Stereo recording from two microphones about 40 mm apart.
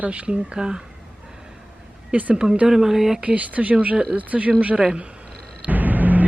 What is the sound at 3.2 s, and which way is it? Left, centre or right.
Speech, right.